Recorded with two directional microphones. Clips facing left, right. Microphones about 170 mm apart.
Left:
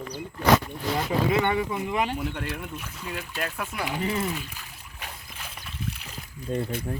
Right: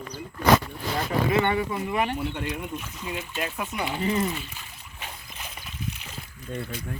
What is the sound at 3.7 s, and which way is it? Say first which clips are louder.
Speech: right 3 dB; 5° left (ahead or behind).